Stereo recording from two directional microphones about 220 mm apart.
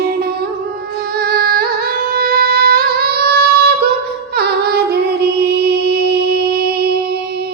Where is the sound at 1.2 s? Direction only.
45° right (ahead or behind).